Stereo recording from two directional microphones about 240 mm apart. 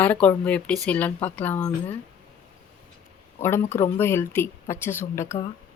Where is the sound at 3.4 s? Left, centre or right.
Centre.